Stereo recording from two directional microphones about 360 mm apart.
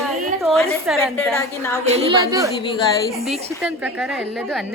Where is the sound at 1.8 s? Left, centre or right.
Centre.